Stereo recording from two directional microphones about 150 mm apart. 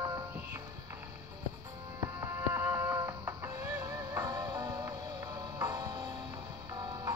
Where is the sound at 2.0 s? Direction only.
15° right (ahead or behind).